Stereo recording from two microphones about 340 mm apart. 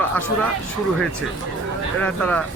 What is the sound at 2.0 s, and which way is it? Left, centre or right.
Speech, centre.